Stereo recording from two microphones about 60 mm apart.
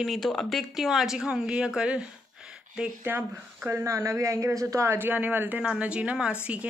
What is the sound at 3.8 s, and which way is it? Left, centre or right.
A man's voice, right.